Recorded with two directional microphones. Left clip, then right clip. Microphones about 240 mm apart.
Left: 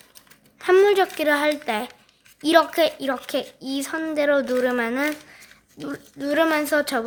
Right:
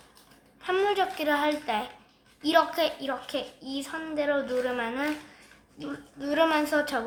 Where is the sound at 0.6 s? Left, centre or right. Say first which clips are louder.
Left 9 dB; left.